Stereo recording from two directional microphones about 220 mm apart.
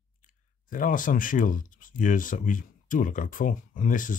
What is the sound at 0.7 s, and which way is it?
Speech, 40° left (ahead or behind).